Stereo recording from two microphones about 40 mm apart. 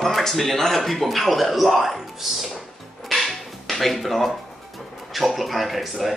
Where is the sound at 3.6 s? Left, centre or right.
Centre.